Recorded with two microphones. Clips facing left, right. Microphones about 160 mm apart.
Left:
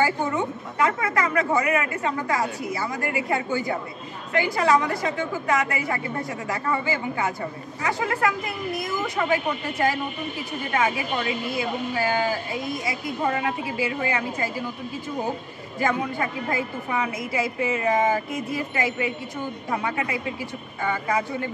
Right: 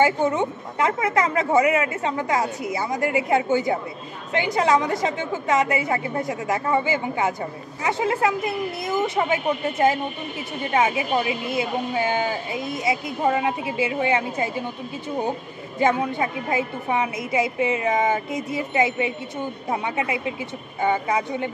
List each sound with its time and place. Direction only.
0.0 s a woman's voice: 20° right (ahead or behind)
15.8 s a woman's voice: 20° right (ahead or behind)